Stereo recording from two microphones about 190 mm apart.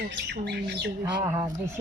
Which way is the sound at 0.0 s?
65° right (ahead or behind).